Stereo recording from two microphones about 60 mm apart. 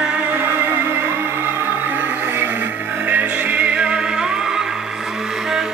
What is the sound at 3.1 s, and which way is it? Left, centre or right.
Music, right.